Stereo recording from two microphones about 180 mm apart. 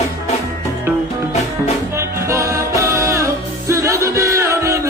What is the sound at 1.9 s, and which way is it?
Music, 15° right (ahead or behind).